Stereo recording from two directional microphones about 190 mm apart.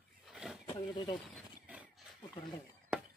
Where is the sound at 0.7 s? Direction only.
25° left (ahead or behind).